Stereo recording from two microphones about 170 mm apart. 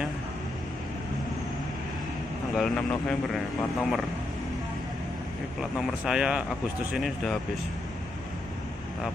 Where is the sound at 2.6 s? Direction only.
5° left (ahead or behind).